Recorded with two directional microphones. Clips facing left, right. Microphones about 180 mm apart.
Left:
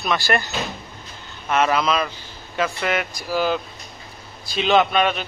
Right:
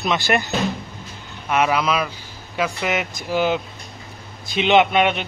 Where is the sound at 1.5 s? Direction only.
10° right (ahead or behind).